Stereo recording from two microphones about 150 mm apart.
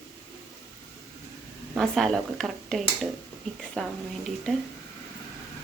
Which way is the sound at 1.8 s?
Centre (ahead or behind).